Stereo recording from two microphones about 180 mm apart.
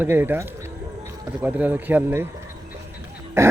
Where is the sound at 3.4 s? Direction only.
15° right (ahead or behind).